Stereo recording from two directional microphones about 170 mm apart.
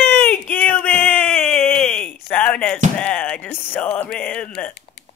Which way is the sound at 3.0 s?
5° left (ahead or behind).